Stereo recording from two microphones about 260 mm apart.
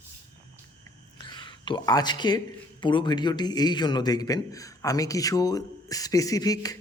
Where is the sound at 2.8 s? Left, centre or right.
Centre.